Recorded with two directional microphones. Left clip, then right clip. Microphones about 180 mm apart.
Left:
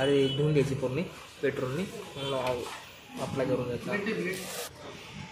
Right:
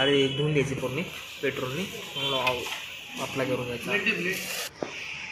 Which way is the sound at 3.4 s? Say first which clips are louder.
Right 1 dB; centre (ahead or behind).